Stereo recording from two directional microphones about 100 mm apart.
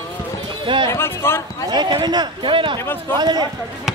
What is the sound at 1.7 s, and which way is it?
A man's voice, 50° right (ahead or behind).